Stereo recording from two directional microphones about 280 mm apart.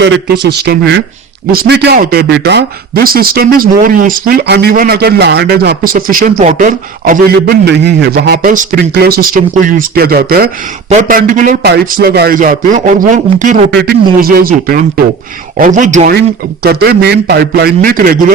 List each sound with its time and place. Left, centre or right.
0.6 s a man's voice: right